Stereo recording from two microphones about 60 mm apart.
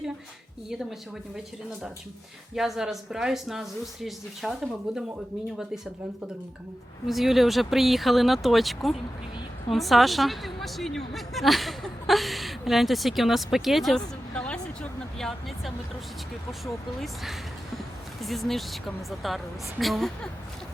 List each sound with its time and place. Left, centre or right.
0.7 s speech: centre
2.6 s speech: centre
7.1 s a woman's voice: centre
13.9 s a sound: centre
15.2 s speech: centre
18.2 s speech: centre